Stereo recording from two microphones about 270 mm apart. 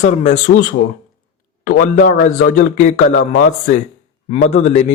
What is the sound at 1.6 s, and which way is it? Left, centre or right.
Speech, left.